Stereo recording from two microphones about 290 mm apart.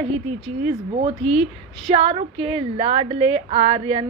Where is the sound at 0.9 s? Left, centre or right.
Centre.